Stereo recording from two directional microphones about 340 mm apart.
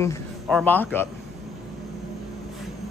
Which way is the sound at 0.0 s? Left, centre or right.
Centre.